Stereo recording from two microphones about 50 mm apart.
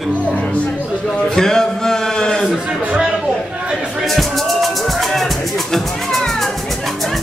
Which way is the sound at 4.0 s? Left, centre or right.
Centre.